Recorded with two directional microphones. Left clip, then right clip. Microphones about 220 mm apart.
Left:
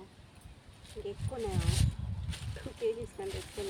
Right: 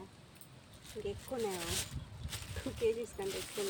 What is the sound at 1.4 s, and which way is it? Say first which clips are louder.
Speech: left 1 dB; 25° right (ahead or behind).